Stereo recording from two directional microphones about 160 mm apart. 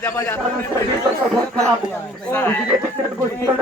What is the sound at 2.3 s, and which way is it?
Speech, 10° left (ahead or behind).